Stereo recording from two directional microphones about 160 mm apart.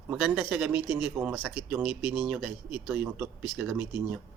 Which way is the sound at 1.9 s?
30° left (ahead or behind).